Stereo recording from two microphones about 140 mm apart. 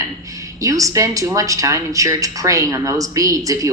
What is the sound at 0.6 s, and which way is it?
A woman's voice, 25° right (ahead or behind).